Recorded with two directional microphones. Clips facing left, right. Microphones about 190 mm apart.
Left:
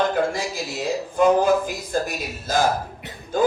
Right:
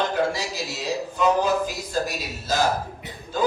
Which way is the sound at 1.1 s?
50° left (ahead or behind).